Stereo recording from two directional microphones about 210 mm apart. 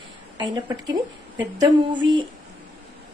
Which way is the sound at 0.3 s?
20° right (ahead or behind).